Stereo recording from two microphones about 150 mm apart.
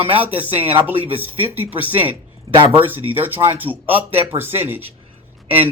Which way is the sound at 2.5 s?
35° right (ahead or behind).